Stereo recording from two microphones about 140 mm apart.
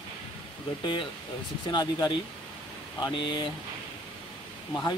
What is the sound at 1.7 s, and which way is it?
Speech, 30° left (ahead or behind).